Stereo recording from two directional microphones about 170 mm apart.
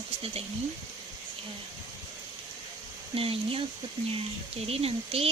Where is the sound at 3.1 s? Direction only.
35° right (ahead or behind).